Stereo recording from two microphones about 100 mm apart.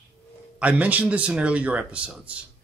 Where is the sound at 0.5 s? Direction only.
15° right (ahead or behind).